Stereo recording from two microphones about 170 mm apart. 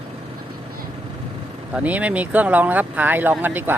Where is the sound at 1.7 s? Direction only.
10° right (ahead or behind).